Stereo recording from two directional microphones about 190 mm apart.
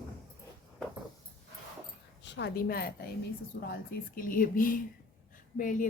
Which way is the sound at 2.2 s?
65° left (ahead or behind).